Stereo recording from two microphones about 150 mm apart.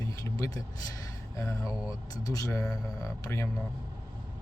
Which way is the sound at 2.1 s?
25° left (ahead or behind).